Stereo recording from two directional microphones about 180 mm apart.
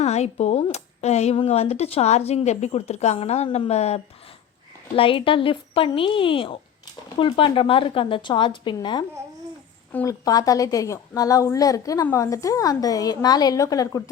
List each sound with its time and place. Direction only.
0.0 s a woman's voice: 40° left (ahead or behind)
9.9 s a woman's voice: 15° left (ahead or behind)